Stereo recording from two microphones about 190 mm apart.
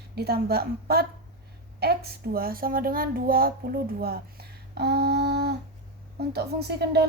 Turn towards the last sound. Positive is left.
turn(degrees=-60)  # may be behind; listen again after turning